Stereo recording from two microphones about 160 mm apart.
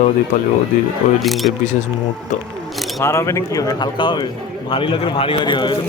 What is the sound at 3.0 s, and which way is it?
A man's voice, 15° left (ahead or behind).